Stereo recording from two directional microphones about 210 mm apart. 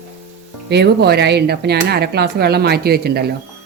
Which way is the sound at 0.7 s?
50° right (ahead or behind).